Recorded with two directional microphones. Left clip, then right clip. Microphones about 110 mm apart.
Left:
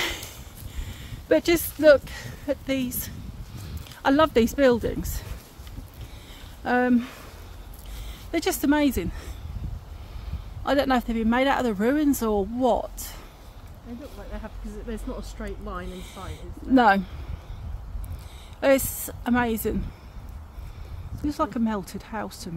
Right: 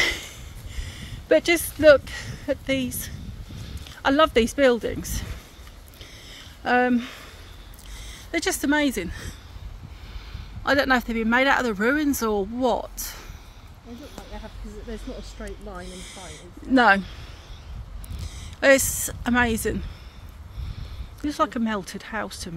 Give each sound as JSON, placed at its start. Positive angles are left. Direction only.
{"t": 0.0, "sound": "a sound", "side_deg": 30}
{"t": 0.7, "sound": "speech", "side_deg": 15}
{"t": 3.8, "sound": "speech", "side_deg": 25}
{"t": 6.3, "sound": "a sound", "side_deg": 10}
{"t": 6.9, "sound": "speech", "side_deg": 25}
{"t": 10.6, "sound": "speech", "side_deg": 5}
{"t": 14.3, "sound": "speech", "side_deg": 5}
{"t": 18.6, "sound": "speech", "side_deg": 0}
{"t": 21.2, "sound": "speech", "side_deg": 5}